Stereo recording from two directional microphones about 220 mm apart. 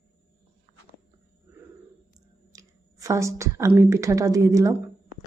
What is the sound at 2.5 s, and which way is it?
A woman's voice, 15° right (ahead or behind).